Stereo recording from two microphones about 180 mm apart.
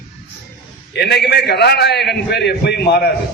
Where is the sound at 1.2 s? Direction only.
65° left (ahead or behind).